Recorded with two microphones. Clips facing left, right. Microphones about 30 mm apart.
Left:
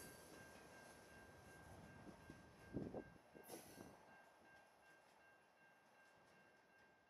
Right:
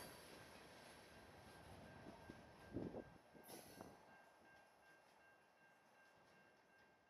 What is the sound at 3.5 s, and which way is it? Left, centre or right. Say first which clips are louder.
Train: right 3 dB; centre.